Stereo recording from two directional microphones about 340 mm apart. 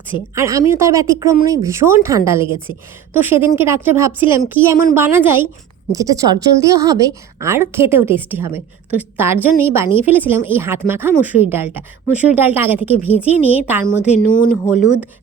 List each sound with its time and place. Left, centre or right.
0.3 s a woman's voice: centre
14.2 s speech: left